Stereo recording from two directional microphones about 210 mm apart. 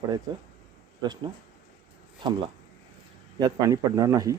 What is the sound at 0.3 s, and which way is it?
Speech, 20° right (ahead or behind).